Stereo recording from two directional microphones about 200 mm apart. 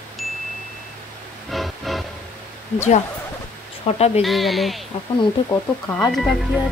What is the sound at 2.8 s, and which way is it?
Speech, 35° left (ahead or behind).